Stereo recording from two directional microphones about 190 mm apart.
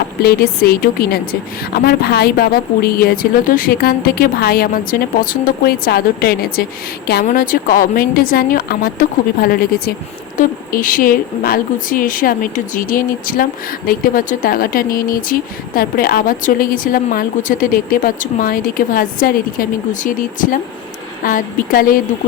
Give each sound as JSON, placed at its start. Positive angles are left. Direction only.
{"t": 0.2, "sound": "a woman's voice", "side_deg": 55}